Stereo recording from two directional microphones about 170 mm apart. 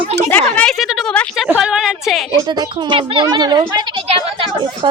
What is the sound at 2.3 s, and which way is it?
Speech, 25° right (ahead or behind).